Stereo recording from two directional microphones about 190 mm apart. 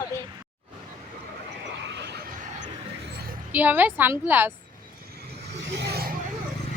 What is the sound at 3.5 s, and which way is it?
A woman's voice, 10° right (ahead or behind).